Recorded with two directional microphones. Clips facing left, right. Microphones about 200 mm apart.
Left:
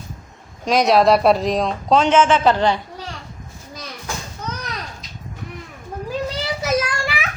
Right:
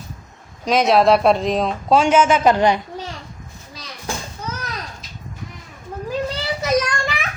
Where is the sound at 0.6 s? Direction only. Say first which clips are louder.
Even; centre (ahead or behind).